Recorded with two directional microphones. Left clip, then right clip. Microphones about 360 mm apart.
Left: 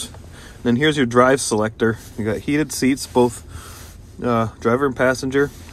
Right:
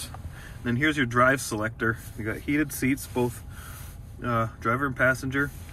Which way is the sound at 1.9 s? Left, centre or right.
Left.